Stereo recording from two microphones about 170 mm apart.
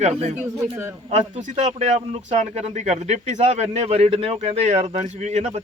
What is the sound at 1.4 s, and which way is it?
Speech, 40° right (ahead or behind).